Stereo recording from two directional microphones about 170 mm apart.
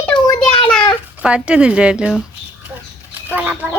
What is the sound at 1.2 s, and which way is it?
Speech, 5° right (ahead or behind).